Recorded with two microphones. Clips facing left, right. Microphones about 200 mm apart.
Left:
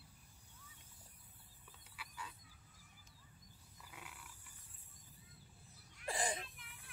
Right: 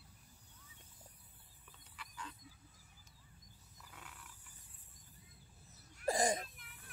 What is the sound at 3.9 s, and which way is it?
Mechanisms, 10° left (ahead or behind).